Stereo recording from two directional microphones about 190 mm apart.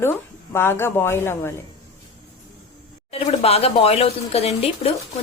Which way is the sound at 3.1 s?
30° left (ahead or behind).